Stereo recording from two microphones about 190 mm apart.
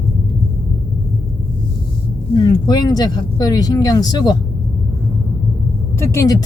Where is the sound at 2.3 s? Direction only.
20° left (ahead or behind).